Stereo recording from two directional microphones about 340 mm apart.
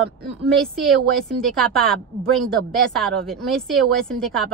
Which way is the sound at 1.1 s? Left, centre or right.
Centre.